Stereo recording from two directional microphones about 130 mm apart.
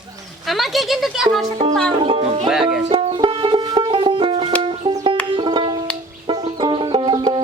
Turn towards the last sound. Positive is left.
turn(degrees=-35)  # may be behind; listen again after turning